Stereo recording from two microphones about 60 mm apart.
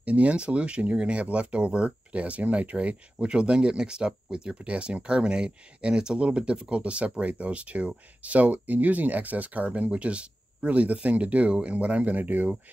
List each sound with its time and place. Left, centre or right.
0.0 s speech: right